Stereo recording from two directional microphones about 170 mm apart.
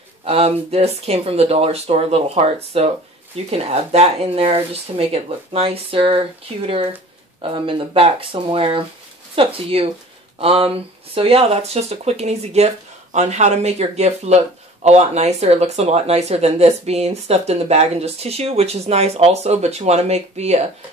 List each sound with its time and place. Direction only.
0.2 s speech: 35° right (ahead or behind)